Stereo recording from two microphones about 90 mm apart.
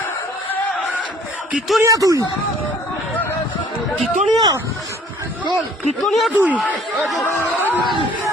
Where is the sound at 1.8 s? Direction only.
40° right (ahead or behind).